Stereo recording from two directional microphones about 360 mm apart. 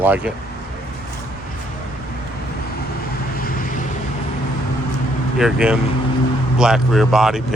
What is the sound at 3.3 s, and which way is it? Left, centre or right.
Vehicle, left.